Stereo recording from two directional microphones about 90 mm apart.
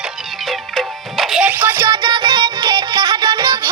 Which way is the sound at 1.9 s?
60° right (ahead or behind).